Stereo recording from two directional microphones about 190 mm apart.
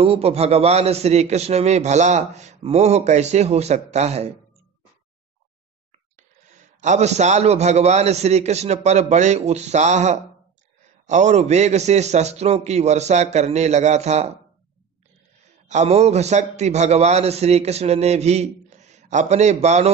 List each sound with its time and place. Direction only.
0.0 s a man's voice: 30° right (ahead or behind)
5.9 s a man's voice: 40° right (ahead or behind)
15.4 s a man's voice: 35° right (ahead or behind)